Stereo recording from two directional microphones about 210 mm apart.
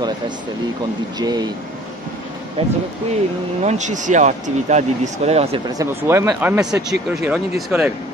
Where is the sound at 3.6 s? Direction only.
35° right (ahead or behind).